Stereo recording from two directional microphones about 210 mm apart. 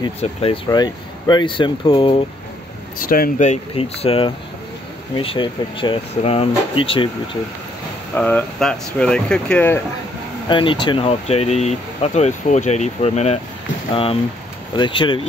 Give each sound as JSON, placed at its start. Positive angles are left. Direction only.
{"t": 0.2, "sound": "speech", "side_deg": 25}
{"t": 3.0, "sound": "speech", "side_deg": 40}
{"t": 8.2, "sound": "speech", "side_deg": 5}
{"t": 10.5, "sound": "speech", "side_deg": 25}
{"t": 14.8, "sound": "speech", "side_deg": 25}